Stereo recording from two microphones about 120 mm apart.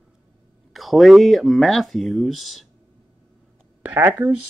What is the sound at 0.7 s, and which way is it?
Speech, centre (ahead or behind).